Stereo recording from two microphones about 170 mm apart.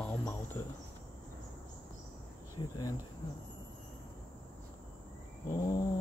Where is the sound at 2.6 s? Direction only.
30° left (ahead or behind).